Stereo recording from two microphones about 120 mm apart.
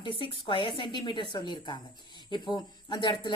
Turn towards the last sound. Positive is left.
turn(degrees=40)  # may be behind; listen again after turning